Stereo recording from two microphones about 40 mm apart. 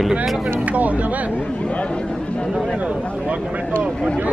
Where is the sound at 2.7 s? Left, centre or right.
Right.